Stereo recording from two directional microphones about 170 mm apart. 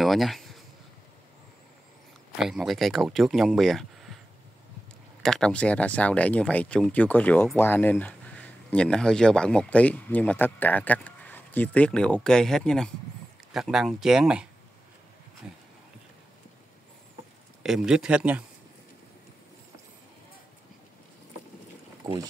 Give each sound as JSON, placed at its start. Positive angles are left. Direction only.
{"t": 0.0, "sound": "a sound", "side_deg": 0}
{"t": 2.3, "sound": "speech", "side_deg": -5}
{"t": 5.2, "sound": "speech", "side_deg": 5}
{"t": 17.6, "sound": "speech", "side_deg": -5}
{"t": 22.0, "sound": "speech", "side_deg": -25}